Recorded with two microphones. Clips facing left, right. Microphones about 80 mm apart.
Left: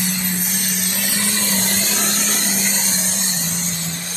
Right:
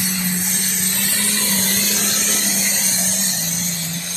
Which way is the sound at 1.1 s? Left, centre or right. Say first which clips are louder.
Left 2 dB; left.